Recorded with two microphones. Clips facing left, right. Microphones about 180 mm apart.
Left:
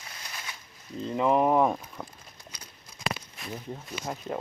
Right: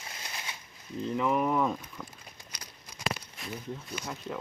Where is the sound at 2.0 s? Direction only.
40° left (ahead or behind).